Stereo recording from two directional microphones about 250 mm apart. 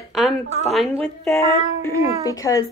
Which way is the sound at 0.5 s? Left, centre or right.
Right.